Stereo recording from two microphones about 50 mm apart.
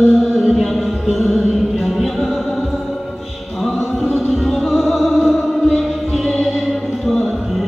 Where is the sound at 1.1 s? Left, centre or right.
Centre.